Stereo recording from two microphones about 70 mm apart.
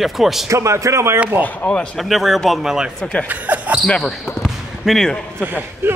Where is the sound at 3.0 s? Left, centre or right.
Centre.